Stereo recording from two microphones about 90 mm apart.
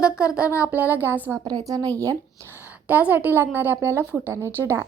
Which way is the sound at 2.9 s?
20° right (ahead or behind).